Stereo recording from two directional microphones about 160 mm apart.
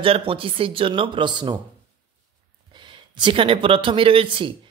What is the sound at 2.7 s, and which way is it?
Speech, 30° right (ahead or behind).